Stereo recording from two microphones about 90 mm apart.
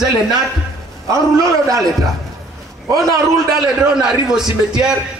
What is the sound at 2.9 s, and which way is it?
Speech, 40° right (ahead or behind).